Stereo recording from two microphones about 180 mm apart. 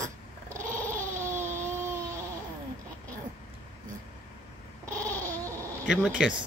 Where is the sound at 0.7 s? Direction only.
10° left (ahead or behind).